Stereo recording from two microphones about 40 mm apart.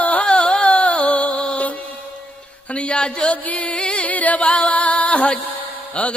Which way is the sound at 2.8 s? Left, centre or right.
Left.